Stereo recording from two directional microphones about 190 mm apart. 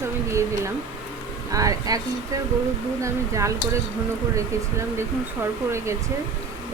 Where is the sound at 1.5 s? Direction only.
15° right (ahead or behind).